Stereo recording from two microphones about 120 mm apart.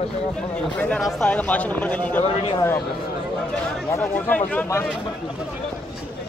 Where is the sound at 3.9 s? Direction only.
20° left (ahead or behind).